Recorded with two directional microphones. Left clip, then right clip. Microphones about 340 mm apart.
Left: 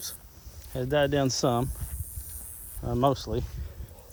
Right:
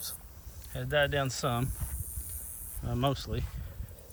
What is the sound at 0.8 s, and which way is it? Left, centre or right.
Speech, centre.